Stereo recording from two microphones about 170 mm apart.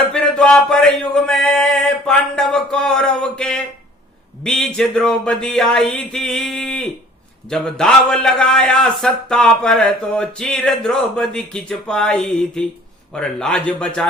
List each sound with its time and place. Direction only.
0.1 s male singing: 5° left (ahead or behind)
4.4 s a man's voice: 5° left (ahead or behind)